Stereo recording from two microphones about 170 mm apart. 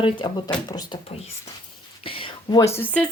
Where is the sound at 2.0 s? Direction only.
30° left (ahead or behind).